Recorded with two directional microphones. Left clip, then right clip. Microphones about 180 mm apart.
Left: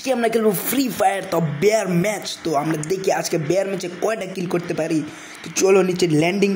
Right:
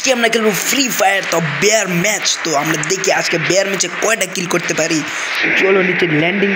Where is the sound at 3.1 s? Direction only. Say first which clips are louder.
Right 6 dB; 5° left (ahead or behind).